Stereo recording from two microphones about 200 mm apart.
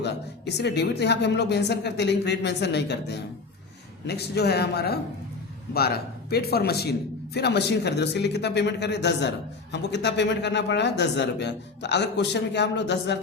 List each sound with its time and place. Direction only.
0.0 s speech: 55° left (ahead or behind)